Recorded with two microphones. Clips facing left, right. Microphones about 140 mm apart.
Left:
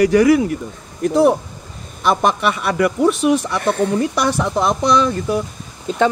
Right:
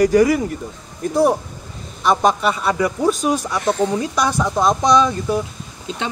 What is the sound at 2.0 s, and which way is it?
Speech, 65° left (ahead or behind).